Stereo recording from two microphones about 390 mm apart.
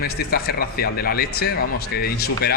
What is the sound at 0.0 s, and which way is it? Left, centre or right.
Speech, left.